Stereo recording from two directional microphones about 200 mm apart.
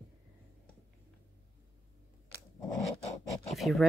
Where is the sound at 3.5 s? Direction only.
Centre (ahead or behind).